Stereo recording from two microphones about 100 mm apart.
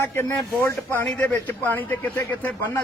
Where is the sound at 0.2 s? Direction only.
20° left (ahead or behind).